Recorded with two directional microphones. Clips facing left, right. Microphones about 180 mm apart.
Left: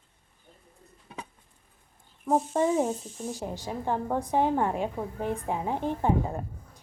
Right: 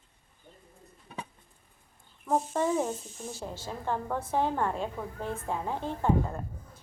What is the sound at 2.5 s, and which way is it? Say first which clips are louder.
A woman's voice: left 3 dB; 15° left (ahead or behind).